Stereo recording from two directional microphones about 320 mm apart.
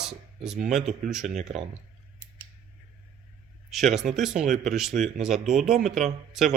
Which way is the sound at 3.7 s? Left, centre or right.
Centre.